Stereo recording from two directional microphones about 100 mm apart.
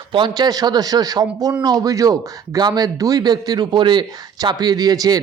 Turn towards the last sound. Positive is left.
turn(degrees=-40)  # may be behind; listen again after turning